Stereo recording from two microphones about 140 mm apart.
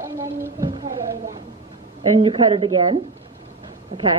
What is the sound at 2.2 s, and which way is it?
A woman's voice, 35° right (ahead or behind).